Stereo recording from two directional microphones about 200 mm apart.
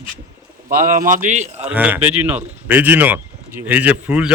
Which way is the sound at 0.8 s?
45° right (ahead or behind).